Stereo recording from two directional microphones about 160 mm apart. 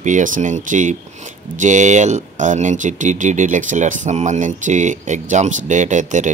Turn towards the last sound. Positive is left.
turn(degrees=-50)  # may be behind; listen again after turning